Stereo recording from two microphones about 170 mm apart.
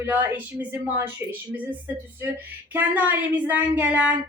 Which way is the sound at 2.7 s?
10° right (ahead or behind).